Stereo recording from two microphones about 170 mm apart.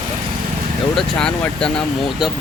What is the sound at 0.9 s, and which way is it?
Speech, 5° left (ahead or behind).